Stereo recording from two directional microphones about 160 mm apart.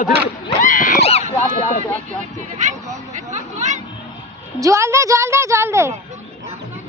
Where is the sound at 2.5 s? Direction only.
50° right (ahead or behind).